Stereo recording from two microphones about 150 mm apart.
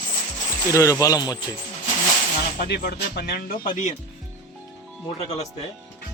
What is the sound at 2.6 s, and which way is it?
Speech, 90° left.